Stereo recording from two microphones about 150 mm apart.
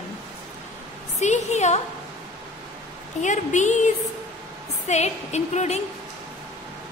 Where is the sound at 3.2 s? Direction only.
55° left (ahead or behind).